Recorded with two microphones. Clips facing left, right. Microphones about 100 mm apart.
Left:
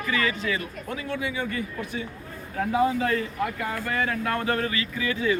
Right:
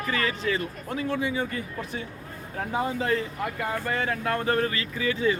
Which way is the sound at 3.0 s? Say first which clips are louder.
Left 1 dB; 25° right (ahead or behind).